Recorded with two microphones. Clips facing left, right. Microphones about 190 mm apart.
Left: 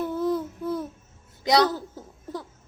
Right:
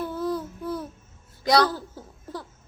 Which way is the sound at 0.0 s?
20° left (ahead or behind).